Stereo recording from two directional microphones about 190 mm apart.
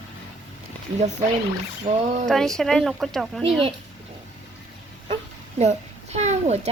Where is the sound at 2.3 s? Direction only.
Centre (ahead or behind).